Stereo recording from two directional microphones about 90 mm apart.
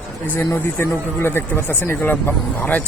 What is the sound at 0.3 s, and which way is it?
Speech, 25° left (ahead or behind).